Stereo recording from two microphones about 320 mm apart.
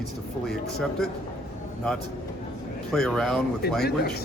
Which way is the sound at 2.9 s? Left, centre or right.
Centre.